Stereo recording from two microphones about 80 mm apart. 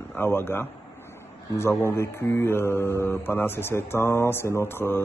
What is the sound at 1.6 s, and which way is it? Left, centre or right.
Mantra, left.